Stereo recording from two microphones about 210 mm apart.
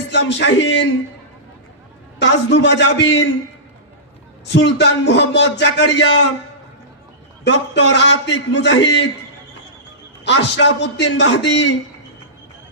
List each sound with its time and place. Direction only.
0.1 s speech: 55° left (ahead or behind)
2.1 s speech: 55° left (ahead or behind)
4.4 s speech: 55° left (ahead or behind)
7.4 s speech: 55° left (ahead or behind)
10.2 s speech: 55° left (ahead or behind)